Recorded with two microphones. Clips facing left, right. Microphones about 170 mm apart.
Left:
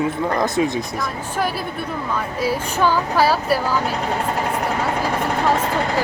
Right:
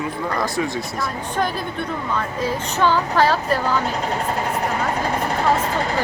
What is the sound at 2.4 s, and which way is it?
Child singing, 10° left (ahead or behind).